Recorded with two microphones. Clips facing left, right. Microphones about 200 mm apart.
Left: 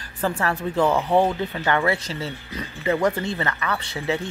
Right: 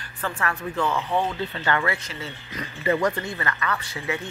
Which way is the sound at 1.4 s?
15° left (ahead or behind).